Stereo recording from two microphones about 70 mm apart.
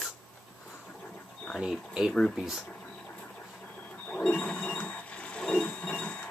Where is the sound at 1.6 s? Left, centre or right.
Centre.